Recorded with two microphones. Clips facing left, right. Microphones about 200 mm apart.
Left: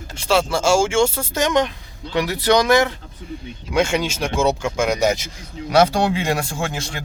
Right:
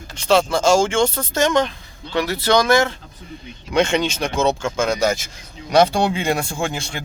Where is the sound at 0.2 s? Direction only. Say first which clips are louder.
Right 2 dB; 10° left (ahead or behind).